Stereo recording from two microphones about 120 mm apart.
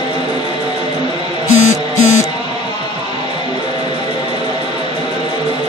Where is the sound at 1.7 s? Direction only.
75° left (ahead or behind).